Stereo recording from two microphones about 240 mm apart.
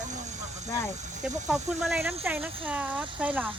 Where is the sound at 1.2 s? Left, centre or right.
Centre.